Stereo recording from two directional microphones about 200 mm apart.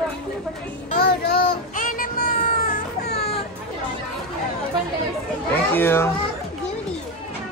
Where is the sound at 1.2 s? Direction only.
45° left (ahead or behind).